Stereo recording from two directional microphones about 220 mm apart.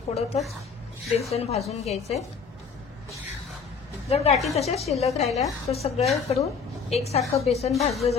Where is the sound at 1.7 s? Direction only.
30° left (ahead or behind).